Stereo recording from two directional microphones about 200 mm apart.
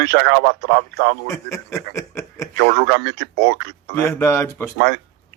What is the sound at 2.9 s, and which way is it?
Speech, 55° right (ahead or behind).